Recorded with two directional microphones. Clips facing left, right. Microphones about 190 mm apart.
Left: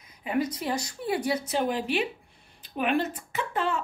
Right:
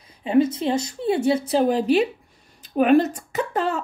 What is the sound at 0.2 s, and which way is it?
A woman's voice, 25° right (ahead or behind).